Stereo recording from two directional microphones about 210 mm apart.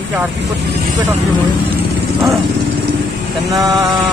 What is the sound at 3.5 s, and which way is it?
Speech, 15° right (ahead or behind).